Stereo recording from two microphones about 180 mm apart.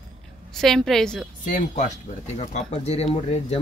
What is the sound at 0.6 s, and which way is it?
Speech, centre (ahead or behind).